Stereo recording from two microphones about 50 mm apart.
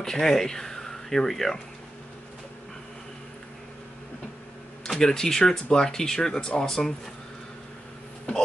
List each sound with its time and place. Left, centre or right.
0.0 s speech: centre
4.8 s speech: centre